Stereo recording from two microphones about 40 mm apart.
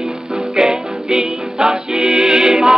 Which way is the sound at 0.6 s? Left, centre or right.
Centre.